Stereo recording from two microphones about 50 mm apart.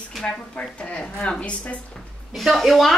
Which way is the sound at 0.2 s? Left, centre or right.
Centre.